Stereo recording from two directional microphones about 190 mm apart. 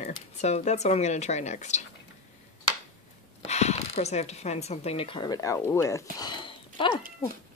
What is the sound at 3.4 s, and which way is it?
Speech, 35° left (ahead or behind).